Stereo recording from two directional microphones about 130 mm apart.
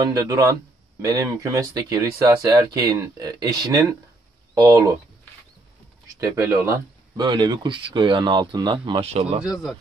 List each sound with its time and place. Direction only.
0.0 s speech: 25° right (ahead or behind)
6.1 s speech: 25° right (ahead or behind)
9.0 s speech: 55° right (ahead or behind)
9.4 s speech: 5° right (ahead or behind)